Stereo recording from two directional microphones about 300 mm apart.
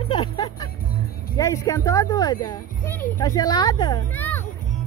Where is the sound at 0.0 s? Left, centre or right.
Centre.